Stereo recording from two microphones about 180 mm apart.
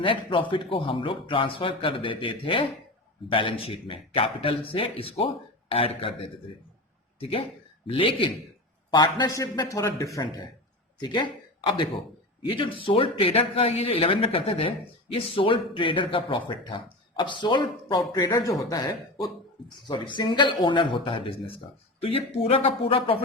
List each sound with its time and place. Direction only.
0.0 s a man's voice: 30° left (ahead or behind)